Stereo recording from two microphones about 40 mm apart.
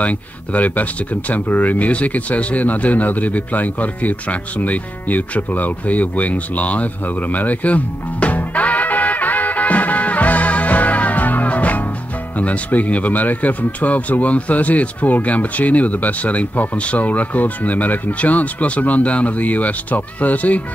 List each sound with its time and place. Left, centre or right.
0.0 s speech: left